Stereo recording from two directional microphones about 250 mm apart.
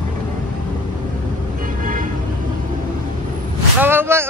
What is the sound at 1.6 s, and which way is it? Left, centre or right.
Vehicle, right.